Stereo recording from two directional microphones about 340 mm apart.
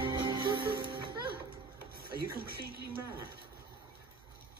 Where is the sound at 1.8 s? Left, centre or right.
Right.